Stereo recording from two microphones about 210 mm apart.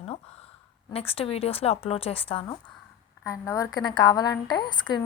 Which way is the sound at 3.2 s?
15° left (ahead or behind).